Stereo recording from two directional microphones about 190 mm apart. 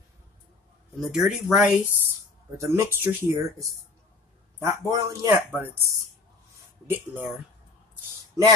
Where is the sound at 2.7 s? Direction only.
10° right (ahead or behind).